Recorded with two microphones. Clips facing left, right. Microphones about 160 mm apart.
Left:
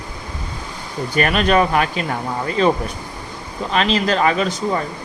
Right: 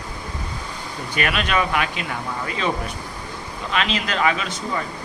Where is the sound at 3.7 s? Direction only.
35° left (ahead or behind).